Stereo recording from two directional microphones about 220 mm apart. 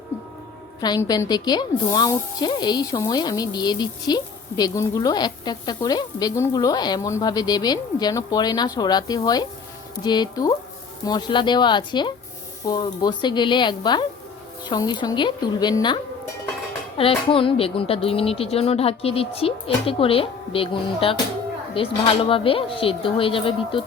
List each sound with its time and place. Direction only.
0.8 s a woman's voice: 15° left (ahead or behind)
17.0 s speech: 25° left (ahead or behind)